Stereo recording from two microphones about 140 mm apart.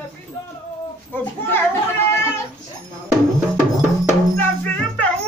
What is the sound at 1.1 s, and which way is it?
Children playing, 15° left (ahead or behind).